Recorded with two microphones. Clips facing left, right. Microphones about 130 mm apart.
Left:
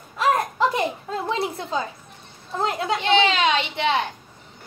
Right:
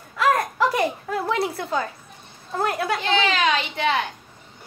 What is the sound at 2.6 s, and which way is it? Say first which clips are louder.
A woman's voice: even; 20° left (ahead or behind).